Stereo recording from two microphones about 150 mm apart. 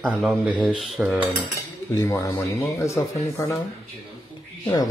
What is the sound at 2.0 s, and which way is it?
A man's voice, 20° left (ahead or behind).